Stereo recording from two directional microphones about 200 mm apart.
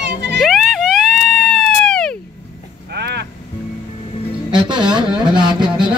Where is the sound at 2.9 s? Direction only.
55° right (ahead or behind).